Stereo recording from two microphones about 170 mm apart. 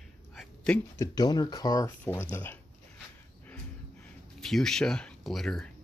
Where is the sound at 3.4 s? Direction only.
5° left (ahead or behind).